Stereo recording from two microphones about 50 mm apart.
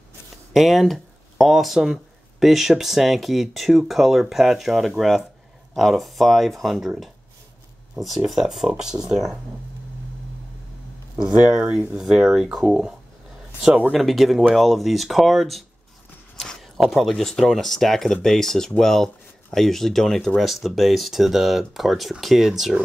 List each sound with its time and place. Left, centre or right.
0.5 s speech: centre
8.3 s speech: centre
11.1 s speech: centre
13.9 s speech: centre
16.3 s a sound: centre
16.6 s speech: centre